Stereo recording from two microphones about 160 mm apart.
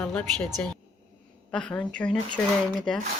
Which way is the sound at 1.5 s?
5° left (ahead or behind).